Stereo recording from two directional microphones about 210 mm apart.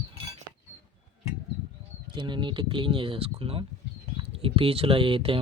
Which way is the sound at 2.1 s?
20° right (ahead or behind).